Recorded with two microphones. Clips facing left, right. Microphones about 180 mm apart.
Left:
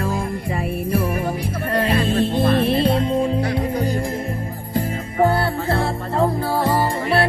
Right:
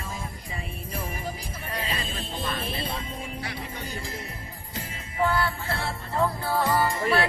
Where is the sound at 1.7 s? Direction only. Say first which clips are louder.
Left 15 dB; 70° left (ahead or behind).